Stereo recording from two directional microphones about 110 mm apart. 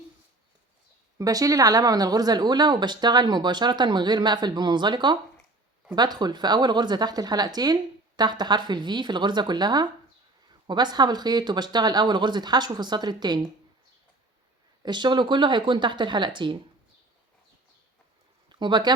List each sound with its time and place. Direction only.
1.2 s speech: 35° right (ahead or behind)
14.8 s speech: 45° right (ahead or behind)
18.4 s speech: 45° right (ahead or behind)